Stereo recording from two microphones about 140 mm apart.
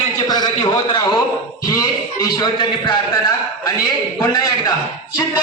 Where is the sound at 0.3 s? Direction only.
30° left (ahead or behind).